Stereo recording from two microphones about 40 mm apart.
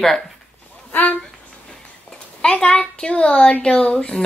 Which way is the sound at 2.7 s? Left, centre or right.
Left.